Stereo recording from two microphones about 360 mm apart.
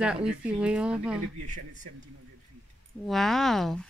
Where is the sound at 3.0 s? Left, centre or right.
Centre.